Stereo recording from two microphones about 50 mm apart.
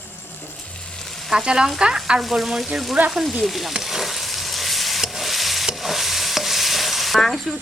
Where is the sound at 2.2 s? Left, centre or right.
Centre.